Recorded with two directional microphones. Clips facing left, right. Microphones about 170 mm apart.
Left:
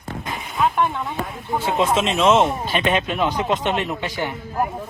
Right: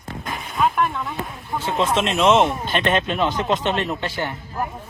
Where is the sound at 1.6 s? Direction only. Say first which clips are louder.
Left 1 dB; 10° left (ahead or behind).